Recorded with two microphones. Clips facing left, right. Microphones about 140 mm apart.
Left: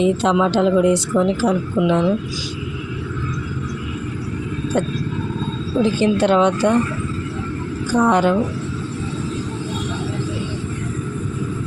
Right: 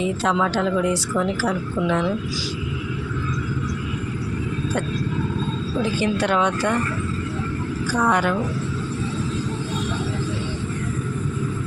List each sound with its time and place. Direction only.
0.0 s a woman's voice: 20° left (ahead or behind)
6.0 s a woman's voice: 25° left (ahead or behind)
7.9 s a woman's voice: 20° left (ahead or behind)